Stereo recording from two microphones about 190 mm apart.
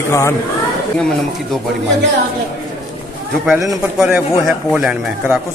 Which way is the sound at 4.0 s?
5° right (ahead or behind).